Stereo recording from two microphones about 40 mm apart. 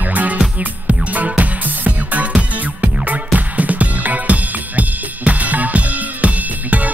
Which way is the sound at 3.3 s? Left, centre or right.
Right.